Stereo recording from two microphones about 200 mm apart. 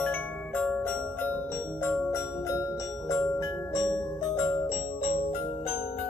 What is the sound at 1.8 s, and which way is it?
Glockenspiel, 10° left (ahead or behind).